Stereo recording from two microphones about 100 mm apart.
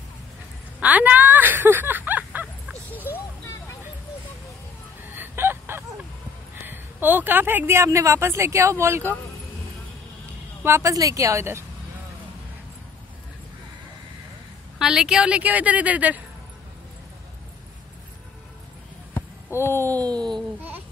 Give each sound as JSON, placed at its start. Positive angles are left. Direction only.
{"t": 0.7, "sound": "a sound", "side_deg": -15}
{"t": 2.9, "sound": "music", "side_deg": 20}
{"t": 5.1, "sound": "fowl", "side_deg": -20}
{"t": 6.5, "sound": "a woman's voice", "side_deg": -20}
{"t": 10.6, "sound": "speech", "side_deg": -30}
{"t": 14.8, "sound": "a woman's voice", "side_deg": -5}
{"t": 19.5, "sound": "speech", "side_deg": -20}
{"t": 19.9, "sound": "speech", "side_deg": -40}